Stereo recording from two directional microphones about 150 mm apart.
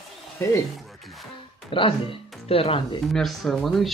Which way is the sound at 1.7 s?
35° left (ahead or behind).